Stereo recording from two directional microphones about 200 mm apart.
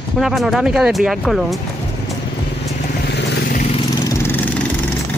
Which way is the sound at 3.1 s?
55° left (ahead or behind).